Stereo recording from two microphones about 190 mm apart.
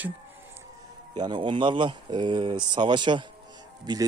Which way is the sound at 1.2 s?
25° right (ahead or behind).